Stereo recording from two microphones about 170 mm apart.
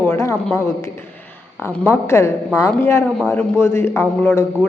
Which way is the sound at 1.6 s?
10° left (ahead or behind).